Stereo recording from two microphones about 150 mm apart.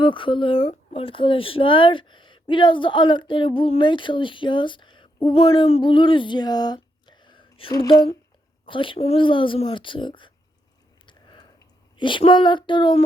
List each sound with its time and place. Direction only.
0.0 s speech: 35° left (ahead or behind)
7.7 s speech: 20° left (ahead or behind)
8.6 s speech: 35° left (ahead or behind)
11.0 s a sound: 30° left (ahead or behind)
11.9 s speech: 35° left (ahead or behind)